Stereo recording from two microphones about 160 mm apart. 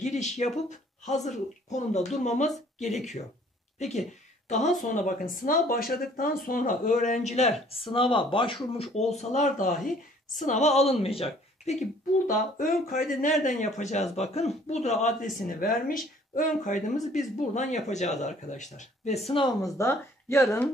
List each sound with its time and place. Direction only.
0.0 s a sound: 45° left (ahead or behind)
0.7 s speech: 45° left (ahead or behind)
4.5 s speech: 45° left (ahead or behind)
19.6 s speech: 15° left (ahead or behind)